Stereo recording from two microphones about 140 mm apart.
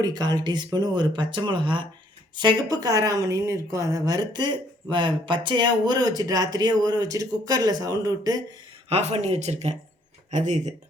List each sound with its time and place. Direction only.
0.0 s speech: 30° right (ahead or behind)
8.9 s speech: 50° right (ahead or behind)